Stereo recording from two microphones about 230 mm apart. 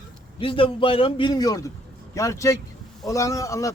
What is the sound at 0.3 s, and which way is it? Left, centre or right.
A man's voice, left.